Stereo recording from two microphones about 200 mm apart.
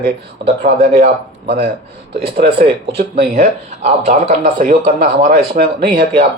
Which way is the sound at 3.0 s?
50° right (ahead or behind).